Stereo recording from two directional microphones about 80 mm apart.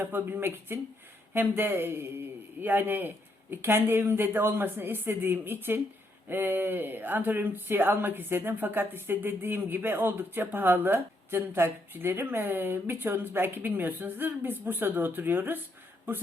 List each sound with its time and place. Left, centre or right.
0.0 s speech: right